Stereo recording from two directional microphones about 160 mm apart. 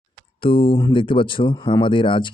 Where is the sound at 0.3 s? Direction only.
35° left (ahead or behind).